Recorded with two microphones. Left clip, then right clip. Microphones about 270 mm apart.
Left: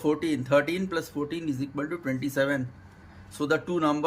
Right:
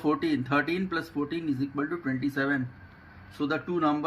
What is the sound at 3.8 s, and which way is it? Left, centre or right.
Speech, centre.